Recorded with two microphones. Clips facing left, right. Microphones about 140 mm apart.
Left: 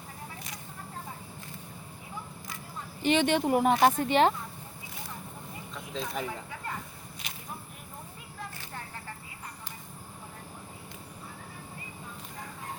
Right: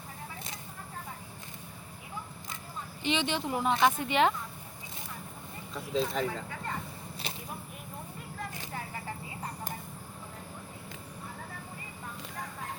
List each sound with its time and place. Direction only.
3.0 s speech: 50° left (ahead or behind); by 4.4 s 35° left (ahead or behind)
5.7 s a sound: centre (ahead or behind)
6.1 s speech: 15° left (ahead or behind)